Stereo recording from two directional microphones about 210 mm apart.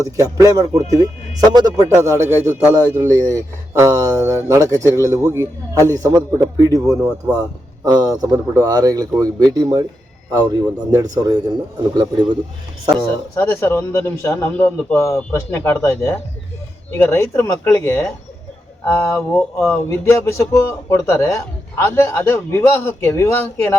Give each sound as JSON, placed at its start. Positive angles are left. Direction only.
{"t": 0.0, "sound": "speech", "side_deg": -15}
{"t": 13.3, "sound": "a man's voice", "side_deg": 10}